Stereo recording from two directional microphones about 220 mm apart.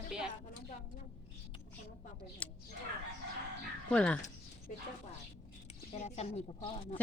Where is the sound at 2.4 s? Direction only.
5° left (ahead or behind).